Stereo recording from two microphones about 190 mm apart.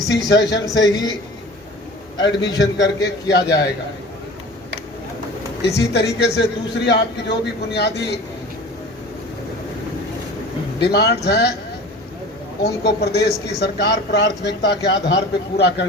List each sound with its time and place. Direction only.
0.1 s a man's voice: 65° left (ahead or behind)
0.6 s a man's voice: 20° left (ahead or behind)
2.6 s a man's voice: 65° left (ahead or behind)
5.6 s a man's voice: 60° left (ahead or behind)
10.8 s a man's voice: 60° left (ahead or behind)
12.8 s a man's voice: 60° left (ahead or behind)